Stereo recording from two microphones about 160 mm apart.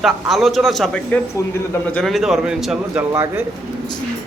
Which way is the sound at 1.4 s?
20° left (ahead or behind).